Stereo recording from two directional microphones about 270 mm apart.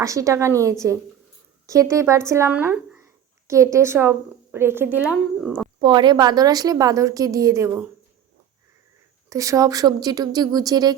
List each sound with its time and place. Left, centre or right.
0.0 s a woman's voice: centre
5.8 s a woman's voice: centre
9.3 s a woman's voice: centre